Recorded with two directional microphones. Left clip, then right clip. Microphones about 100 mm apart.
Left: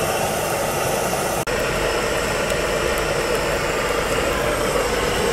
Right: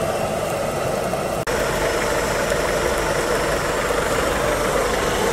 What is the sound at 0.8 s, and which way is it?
Engine, 25° left (ahead or behind).